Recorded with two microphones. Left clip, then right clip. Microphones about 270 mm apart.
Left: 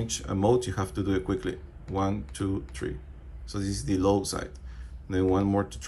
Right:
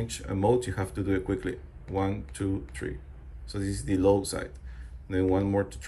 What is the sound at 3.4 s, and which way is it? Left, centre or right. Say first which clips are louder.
Speech: left 1 dB; centre.